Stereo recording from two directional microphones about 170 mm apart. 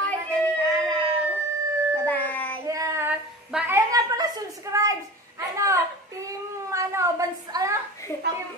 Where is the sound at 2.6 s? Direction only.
20° right (ahead or behind).